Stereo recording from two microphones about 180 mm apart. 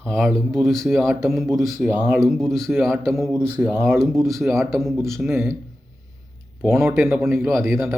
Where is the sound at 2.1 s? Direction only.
Centre (ahead or behind).